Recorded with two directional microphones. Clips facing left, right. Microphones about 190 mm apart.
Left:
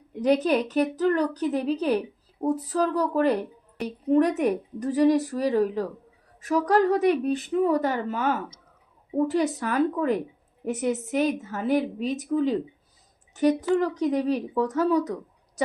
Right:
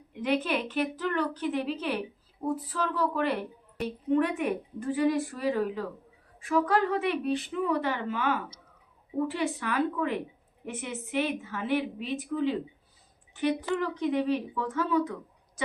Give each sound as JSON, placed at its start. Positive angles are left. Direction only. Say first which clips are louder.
{"t": 0.1, "sound": "a woman's voice", "louder": "left 7 dB", "side_deg": 40}